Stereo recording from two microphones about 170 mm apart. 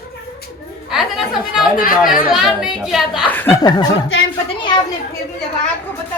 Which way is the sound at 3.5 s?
25° left (ahead or behind).